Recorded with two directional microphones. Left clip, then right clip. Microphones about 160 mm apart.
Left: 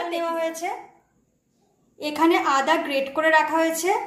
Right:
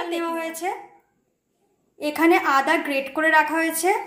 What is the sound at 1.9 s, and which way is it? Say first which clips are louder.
A woman's voice: right 1 dB; 15° right (ahead or behind).